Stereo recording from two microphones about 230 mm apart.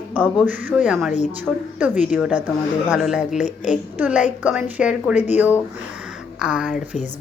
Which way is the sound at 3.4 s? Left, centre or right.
Left.